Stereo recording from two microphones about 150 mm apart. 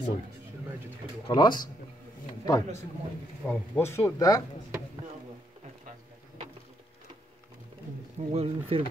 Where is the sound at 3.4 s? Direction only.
5° left (ahead or behind); by 4.4 s 25° left (ahead or behind).